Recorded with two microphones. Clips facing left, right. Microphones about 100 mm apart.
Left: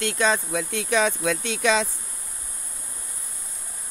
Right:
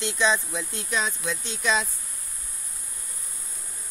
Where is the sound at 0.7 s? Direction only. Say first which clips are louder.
Left 7 dB; 90° left.